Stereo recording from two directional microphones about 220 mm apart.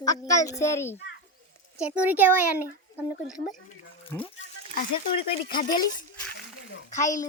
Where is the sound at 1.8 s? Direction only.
5° right (ahead or behind).